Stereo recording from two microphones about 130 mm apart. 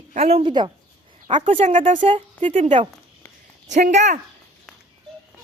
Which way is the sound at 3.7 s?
65° right (ahead or behind).